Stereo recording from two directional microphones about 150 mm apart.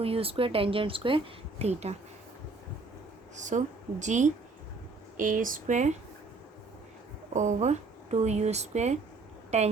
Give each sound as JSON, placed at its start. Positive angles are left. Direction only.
{"t": 0.0, "sound": "speech", "side_deg": -40}
{"t": 3.3, "sound": "speech", "side_deg": -55}
{"t": 7.3, "sound": "speech", "side_deg": -50}